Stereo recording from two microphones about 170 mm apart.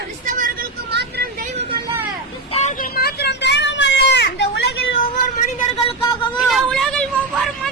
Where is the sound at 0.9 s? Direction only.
80° right.